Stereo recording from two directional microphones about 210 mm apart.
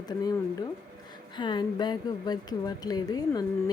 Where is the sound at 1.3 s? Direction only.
20° left (ahead or behind).